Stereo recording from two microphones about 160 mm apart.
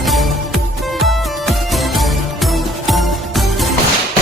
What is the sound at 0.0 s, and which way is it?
Music, centre (ahead or behind).